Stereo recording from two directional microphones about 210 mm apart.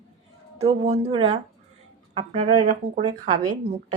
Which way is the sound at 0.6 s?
30° right (ahead or behind).